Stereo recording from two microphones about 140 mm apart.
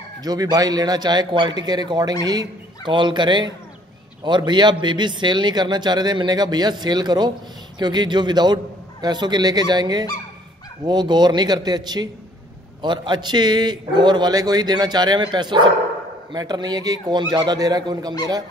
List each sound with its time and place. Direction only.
0.2 s a man's voice: 30° right (ahead or behind)